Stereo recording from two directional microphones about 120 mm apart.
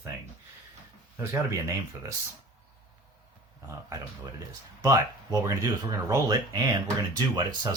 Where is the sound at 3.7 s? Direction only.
30° right (ahead or behind).